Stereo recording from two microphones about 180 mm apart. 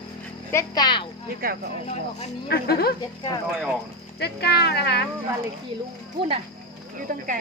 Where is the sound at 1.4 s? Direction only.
55° right (ahead or behind).